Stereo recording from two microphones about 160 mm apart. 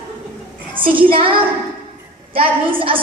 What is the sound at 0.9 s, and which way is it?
A woman's voice, 35° right (ahead or behind).